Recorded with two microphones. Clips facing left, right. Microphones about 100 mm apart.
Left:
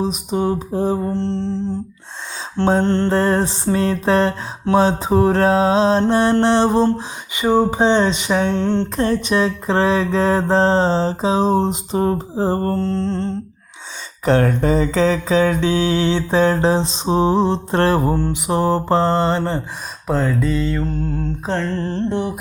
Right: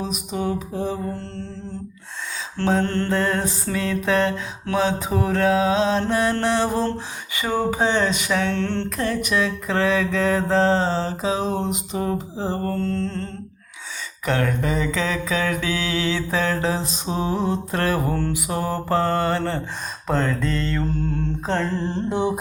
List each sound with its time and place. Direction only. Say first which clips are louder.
0.0 s mantra: left 6 dB; 30° left (ahead or behind)
2.6 s mantra: left 5 dB; 25° left (ahead or behind)
3.1 s mantra: left 5 dB; 35° left (ahead or behind); by 8.9 s 20° left (ahead or behind)
9.0 s mantra: left 3 dB; 30° left (ahead or behind)
12.8 s mantra: left 5 dB; 30° left (ahead or behind)
20.1 s mantra: left 4 dB; 5° left (ahead or behind)
21.7 s music: left 3 dB; 15° right (ahead or behind)